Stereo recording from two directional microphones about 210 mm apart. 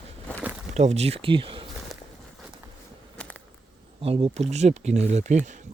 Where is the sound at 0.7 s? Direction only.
30° right (ahead or behind).